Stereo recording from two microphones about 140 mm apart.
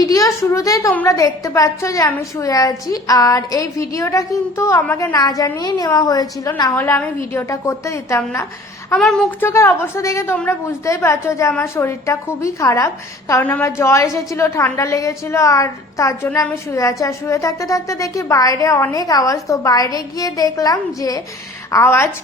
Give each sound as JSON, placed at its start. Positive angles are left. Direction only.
{"t": 0.0, "sound": "a woman's voice", "side_deg": 25}
{"t": 5.1, "sound": "a woman's voice", "side_deg": 25}
{"t": 6.7, "sound": "a woman's voice", "side_deg": 15}
{"t": 9.0, "sound": "speech", "side_deg": 0}
{"t": 9.4, "sound": "a woman's voice", "side_deg": 15}